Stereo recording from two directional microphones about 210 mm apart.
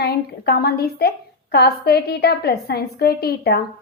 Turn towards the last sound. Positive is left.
turn(degrees=50)  # may be behind; listen again after turning